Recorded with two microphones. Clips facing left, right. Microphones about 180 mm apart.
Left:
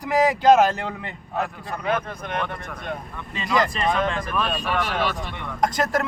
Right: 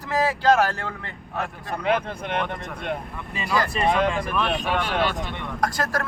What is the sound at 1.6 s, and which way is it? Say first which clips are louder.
Speech: right 2 dB; 25° right (ahead or behind).